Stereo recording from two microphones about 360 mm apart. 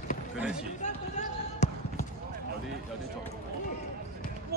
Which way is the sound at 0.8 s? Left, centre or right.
Centre.